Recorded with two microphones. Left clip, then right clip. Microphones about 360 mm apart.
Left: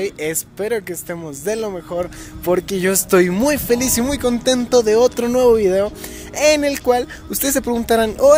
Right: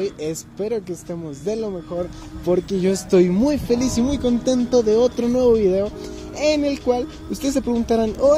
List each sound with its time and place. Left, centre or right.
0.0 s speech: left